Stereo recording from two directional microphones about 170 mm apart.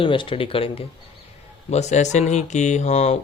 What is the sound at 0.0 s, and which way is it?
Speech, 30° left (ahead or behind).